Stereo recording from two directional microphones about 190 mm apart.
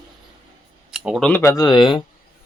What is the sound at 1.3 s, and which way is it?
Speech, 15° left (ahead or behind).